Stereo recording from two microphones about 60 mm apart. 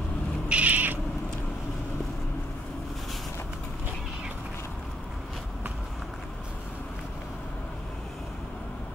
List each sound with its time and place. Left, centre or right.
0.5 s cat: right